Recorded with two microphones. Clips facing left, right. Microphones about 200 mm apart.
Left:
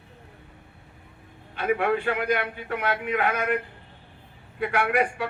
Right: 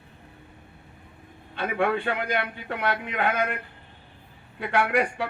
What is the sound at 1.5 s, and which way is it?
Speech, 30° right (ahead or behind).